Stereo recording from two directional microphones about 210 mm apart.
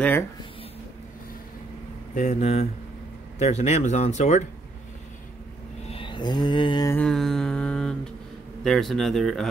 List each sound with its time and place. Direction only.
2.1 s speech: 35° left (ahead or behind)
5.9 s mantra: 25° left (ahead or behind)
7.0 s a sound: centre (ahead or behind)
8.6 s speech: centre (ahead or behind)